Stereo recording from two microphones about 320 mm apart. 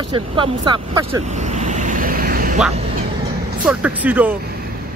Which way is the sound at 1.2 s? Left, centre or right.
Right.